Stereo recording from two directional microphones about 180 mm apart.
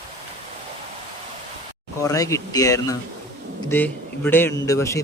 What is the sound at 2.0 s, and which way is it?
A man's voice, 15° left (ahead or behind).